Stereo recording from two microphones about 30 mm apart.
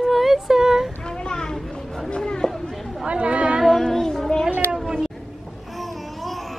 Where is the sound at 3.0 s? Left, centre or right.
Right.